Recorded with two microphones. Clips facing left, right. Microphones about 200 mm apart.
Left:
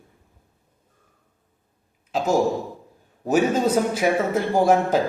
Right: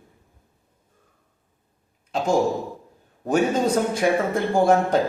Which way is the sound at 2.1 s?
5° left (ahead or behind).